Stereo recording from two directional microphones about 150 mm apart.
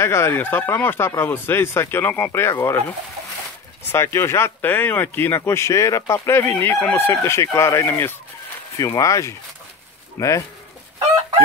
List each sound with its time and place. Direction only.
0.0 s speech: 15° left (ahead or behind)
3.8 s speech: 15° left (ahead or behind)